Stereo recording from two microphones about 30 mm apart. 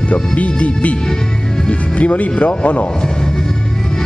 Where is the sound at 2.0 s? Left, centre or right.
Left.